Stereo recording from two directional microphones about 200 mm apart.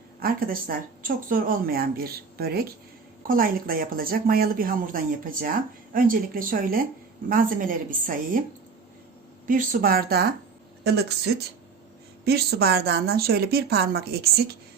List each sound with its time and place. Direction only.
0.2 s a woman's voice: 45° right (ahead or behind)
9.5 s a woman's voice: 45° right (ahead or behind)
12.2 s a woman's voice: 50° right (ahead or behind)